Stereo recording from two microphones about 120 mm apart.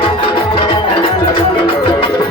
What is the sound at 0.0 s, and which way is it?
Music, 45° left (ahead or behind).